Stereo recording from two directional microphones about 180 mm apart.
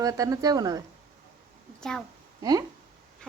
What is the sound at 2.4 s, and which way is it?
Speech, 20° right (ahead or behind).